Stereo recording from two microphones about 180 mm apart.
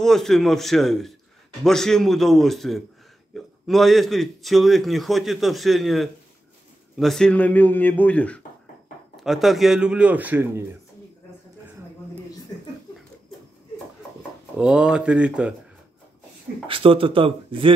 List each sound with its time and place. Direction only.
0.0 s a man's voice: centre (ahead or behind)
14.6 s a man's voice: 5° right (ahead or behind)
16.6 s speech: 30° right (ahead or behind)